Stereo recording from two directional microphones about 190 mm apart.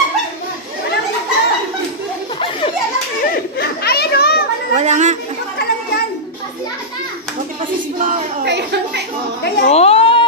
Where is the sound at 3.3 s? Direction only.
55° left (ahead or behind).